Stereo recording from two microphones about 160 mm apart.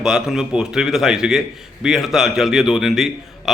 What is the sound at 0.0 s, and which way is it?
A man's voice, 5° right (ahead or behind).